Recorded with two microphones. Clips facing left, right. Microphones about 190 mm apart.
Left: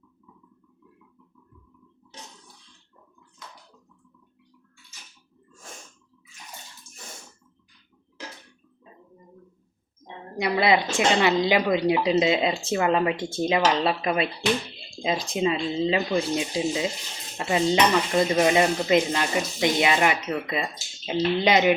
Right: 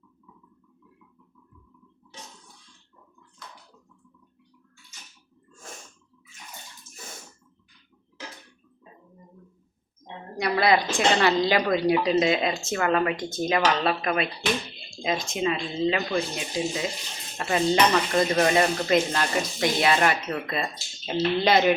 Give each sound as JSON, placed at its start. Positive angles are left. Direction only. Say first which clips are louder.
{"t": 10.3, "sound": "speech", "louder": "even", "side_deg": 20}
{"t": 16.0, "sound": "speech", "louder": "left 3 dB", "side_deg": 20}
{"t": 17.3, "sound": "dishes", "louder": "left 1 dB", "side_deg": 20}